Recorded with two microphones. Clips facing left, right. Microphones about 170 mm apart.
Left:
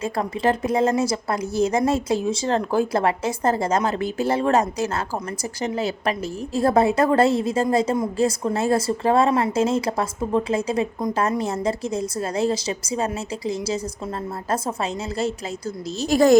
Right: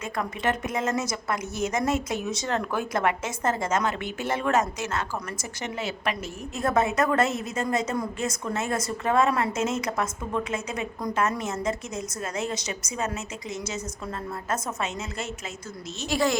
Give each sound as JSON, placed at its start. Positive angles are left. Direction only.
{"t": 0.0, "sound": "a woman's voice", "side_deg": 30}
{"t": 16.0, "sound": "a woman's voice", "side_deg": 45}